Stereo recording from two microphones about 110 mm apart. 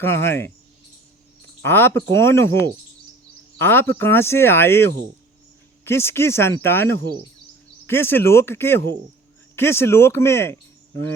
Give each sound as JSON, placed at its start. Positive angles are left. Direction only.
{"t": 0.0, "sound": "speech", "side_deg": 20}
{"t": 1.6, "sound": "speech", "side_deg": 20}